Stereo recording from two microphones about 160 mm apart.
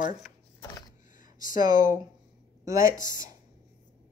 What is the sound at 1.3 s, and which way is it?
Speech, 60° left (ahead or behind).